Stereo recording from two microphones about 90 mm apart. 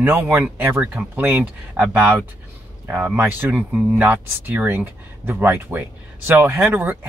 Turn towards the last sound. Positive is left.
turn(degrees=-25)  # may be behind; listen again after turning